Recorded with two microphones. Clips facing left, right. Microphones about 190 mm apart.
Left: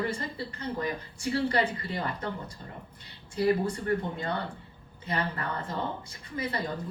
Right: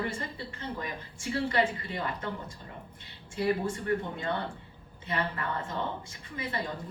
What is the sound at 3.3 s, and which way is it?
A woman's voice, 40° left (ahead or behind).